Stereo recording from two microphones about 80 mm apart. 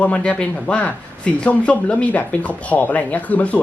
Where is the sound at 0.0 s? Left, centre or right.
Centre.